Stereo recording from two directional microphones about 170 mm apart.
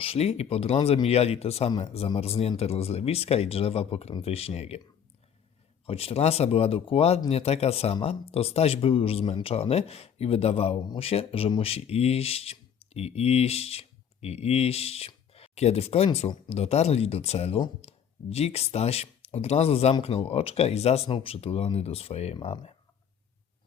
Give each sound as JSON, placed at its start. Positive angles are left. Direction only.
{"t": 0.0, "sound": "speech", "side_deg": 35}
{"t": 5.8, "sound": "speech", "side_deg": 35}